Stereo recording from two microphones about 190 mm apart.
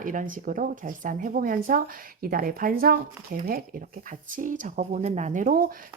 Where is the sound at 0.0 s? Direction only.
45° right (ahead or behind).